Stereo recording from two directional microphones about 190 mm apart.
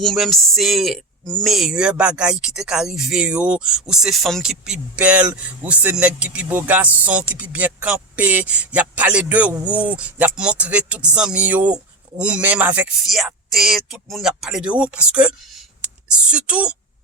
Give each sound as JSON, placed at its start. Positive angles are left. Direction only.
{"t": 0.0, "sound": "speech", "side_deg": 0}